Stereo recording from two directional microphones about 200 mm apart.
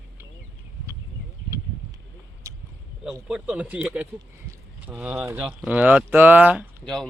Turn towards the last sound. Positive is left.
turn(degrees=0)  # may be behind; listen again after turning